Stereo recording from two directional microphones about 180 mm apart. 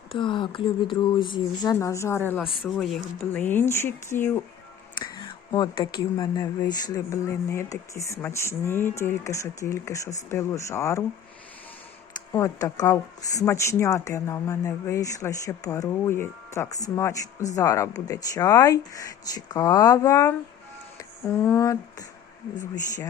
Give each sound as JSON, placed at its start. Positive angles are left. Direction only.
{"t": 0.1, "sound": "speech", "side_deg": 25}
{"t": 2.4, "sound": "speech", "side_deg": 0}
{"t": 4.9, "sound": "speech", "side_deg": 25}
{"t": 12.3, "sound": "speech", "side_deg": 15}